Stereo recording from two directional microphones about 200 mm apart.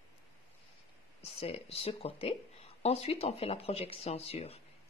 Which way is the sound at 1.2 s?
30° left (ahead or behind).